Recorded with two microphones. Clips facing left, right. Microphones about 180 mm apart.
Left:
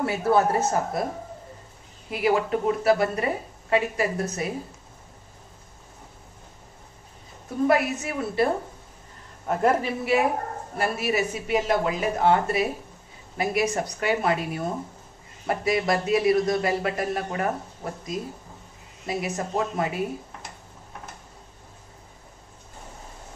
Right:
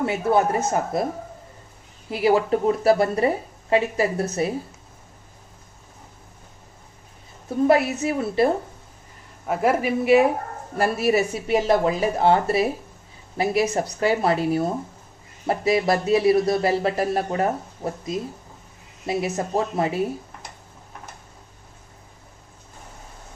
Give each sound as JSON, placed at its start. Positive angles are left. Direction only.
{"t": 0.0, "sound": "speech", "side_deg": -20}
{"t": 2.0, "sound": "speech", "side_deg": -30}
{"t": 7.6, "sound": "speech", "side_deg": -25}
{"t": 9.5, "sound": "a man's voice", "side_deg": -5}
{"t": 10.8, "sound": "speech", "side_deg": -35}
{"t": 19.0, "sound": "speech", "side_deg": -25}